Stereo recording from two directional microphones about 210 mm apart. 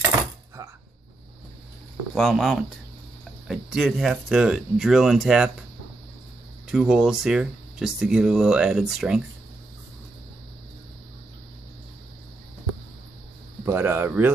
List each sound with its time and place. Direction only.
0.6 s a sound: 15° right (ahead or behind)
2.1 s speech: centre (ahead or behind)
6.7 s speech: centre (ahead or behind)
13.7 s speech: 10° right (ahead or behind)